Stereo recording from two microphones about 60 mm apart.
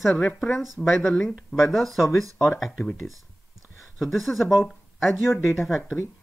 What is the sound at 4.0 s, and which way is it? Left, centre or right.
Speech, centre.